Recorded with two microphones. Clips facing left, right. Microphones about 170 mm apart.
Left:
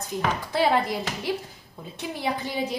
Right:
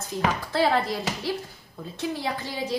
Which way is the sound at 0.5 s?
15° left (ahead or behind).